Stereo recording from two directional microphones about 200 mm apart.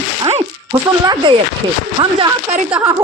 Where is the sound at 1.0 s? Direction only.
20° right (ahead or behind).